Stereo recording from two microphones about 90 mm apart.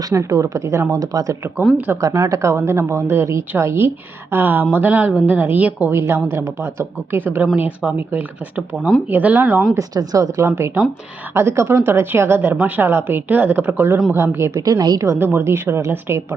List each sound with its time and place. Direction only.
0.1 s speech: 35° right (ahead or behind); by 9.6 s 20° right (ahead or behind)
9.7 s speech: 40° right (ahead or behind)
14.6 s a woman's voice: 45° right (ahead or behind)
15.0 s speech: 35° right (ahead or behind)